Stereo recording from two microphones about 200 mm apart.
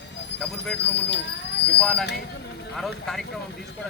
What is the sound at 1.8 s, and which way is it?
Speech, 5° left (ahead or behind).